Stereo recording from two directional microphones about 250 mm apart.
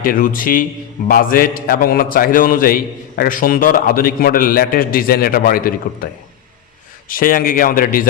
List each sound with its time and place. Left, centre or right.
0.0 s a man's voice: left
7.1 s a man's voice: left